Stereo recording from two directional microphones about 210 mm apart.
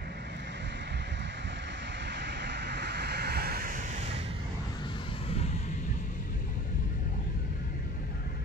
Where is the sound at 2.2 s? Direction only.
55° right (ahead or behind).